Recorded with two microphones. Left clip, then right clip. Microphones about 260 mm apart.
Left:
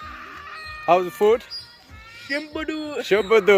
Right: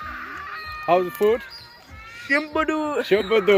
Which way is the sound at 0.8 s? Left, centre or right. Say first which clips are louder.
Left 2 dB; centre.